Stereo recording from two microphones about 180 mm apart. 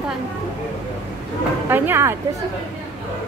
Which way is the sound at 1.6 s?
10° right (ahead or behind).